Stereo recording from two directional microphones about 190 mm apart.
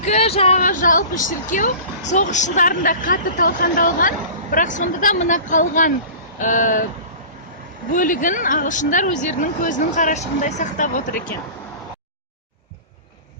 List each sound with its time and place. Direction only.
0.0 s speech: 35° left (ahead or behind)
7.9 s speech: 45° left (ahead or behind)